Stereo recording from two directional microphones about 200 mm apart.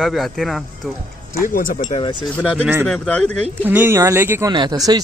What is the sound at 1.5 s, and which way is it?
Speech, 40° left (ahead or behind).